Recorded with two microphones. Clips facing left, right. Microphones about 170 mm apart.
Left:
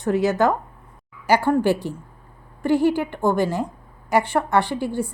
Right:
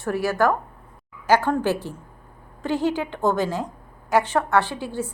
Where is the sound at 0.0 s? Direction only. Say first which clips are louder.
Left 3 dB; 20° left (ahead or behind).